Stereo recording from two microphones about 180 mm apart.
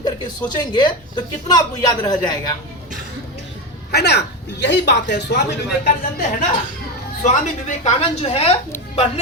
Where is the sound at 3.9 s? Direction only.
65° left (ahead or behind).